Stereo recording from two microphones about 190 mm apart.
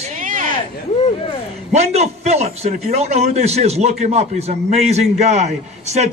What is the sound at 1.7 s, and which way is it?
A man's voice, 35° right (ahead or behind).